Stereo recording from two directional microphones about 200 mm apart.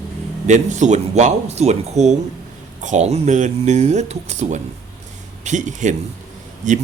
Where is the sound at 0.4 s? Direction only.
35° right (ahead or behind).